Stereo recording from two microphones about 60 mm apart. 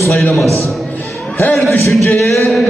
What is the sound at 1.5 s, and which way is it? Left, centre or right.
Speech, centre.